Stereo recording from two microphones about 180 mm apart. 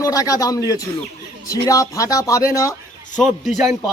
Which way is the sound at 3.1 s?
Centre (ahead or behind).